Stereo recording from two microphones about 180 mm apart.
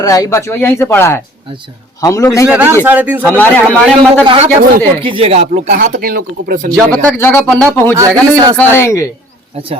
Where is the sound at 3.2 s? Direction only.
10° left (ahead or behind).